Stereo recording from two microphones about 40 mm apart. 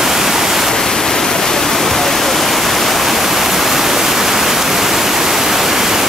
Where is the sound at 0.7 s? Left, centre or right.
Centre.